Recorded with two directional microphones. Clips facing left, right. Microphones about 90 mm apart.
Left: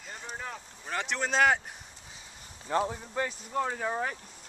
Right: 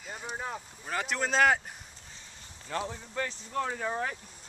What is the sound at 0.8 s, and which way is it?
Speech, centre (ahead or behind).